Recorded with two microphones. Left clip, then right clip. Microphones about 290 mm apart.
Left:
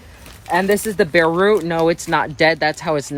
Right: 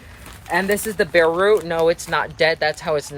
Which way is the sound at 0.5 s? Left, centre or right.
Centre.